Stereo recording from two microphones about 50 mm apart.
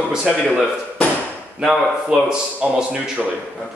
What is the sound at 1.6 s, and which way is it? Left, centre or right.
A man's voice, centre.